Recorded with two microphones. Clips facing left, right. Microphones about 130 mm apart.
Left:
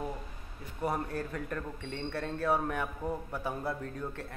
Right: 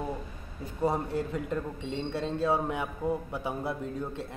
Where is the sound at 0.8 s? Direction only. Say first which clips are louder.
Right 4 dB; 20° right (ahead or behind).